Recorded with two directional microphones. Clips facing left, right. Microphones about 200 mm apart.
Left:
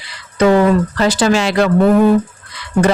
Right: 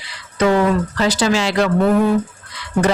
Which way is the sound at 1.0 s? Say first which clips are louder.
Left 1 dB; 55° left (ahead or behind).